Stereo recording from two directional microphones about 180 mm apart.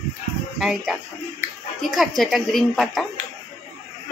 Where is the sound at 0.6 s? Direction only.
Centre (ahead or behind).